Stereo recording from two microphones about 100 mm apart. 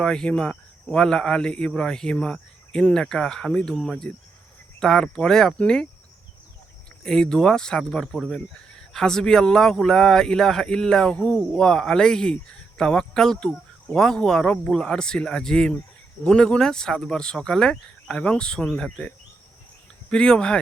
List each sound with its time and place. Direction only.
0.0 s speech: 5° left (ahead or behind)
7.0 s speech: 5° left (ahead or behind)